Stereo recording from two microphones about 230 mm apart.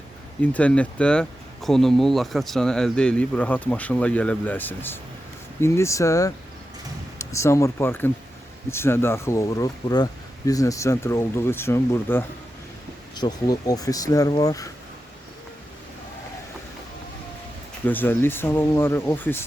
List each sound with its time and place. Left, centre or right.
0.5 s speech: centre
17.8 s speech: centre